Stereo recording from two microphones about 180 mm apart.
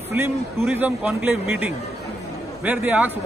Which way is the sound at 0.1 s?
15° right (ahead or behind).